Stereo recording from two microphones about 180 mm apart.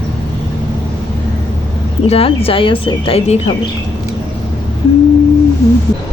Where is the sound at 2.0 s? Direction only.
35° left (ahead or behind).